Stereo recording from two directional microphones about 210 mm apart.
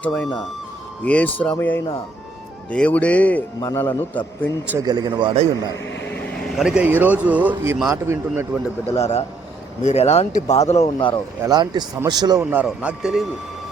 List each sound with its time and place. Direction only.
1.0 s speech: 5° left (ahead or behind)
4.7 s a man's voice: 15° right (ahead or behind)
6.1 s a man's voice: 5° left (ahead or behind); by 8.4 s 15° right (ahead or behind)
8.9 s speech: 30° left (ahead or behind)
11.4 s a man's voice: 20° right (ahead or behind); by 13.2 s 5° right (ahead or behind)